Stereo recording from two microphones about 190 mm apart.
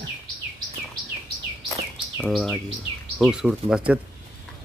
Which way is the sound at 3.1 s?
5° right (ahead or behind).